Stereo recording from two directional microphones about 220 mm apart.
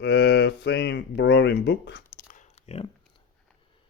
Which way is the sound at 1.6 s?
50° left (ahead or behind).